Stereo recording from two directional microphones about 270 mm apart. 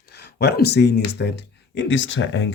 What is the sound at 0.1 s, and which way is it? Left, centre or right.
Speech, left.